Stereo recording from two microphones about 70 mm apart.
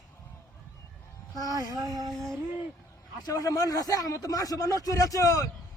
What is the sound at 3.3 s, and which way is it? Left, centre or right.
A man's voice, left.